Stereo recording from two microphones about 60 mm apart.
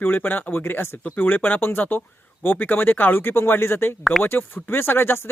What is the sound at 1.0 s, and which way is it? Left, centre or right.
Speech, left.